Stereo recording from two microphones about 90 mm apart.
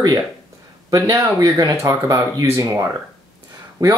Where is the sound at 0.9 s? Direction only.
40° right (ahead or behind).